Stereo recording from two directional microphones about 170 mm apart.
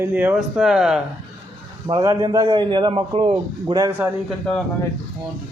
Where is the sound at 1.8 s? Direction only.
20° right (ahead or behind).